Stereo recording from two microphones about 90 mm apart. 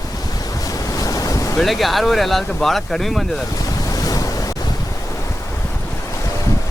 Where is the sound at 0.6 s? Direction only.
40° left (ahead or behind).